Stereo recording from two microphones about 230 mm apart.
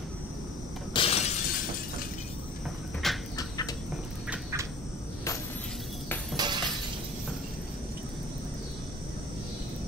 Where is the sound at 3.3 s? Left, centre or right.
Centre.